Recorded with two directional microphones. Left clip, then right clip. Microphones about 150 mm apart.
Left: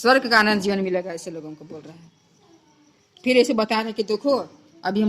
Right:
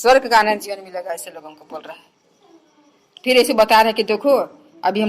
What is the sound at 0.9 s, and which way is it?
Speech, 25° right (ahead or behind).